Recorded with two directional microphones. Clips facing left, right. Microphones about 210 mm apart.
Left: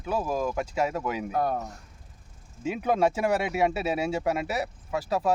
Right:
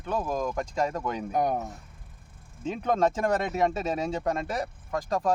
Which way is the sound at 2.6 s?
10° left (ahead or behind).